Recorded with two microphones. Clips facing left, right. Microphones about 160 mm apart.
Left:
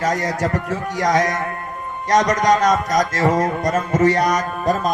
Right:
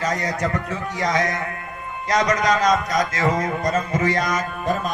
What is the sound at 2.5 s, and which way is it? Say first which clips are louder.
A man's voice: left 3 dB; 40° left (ahead or behind).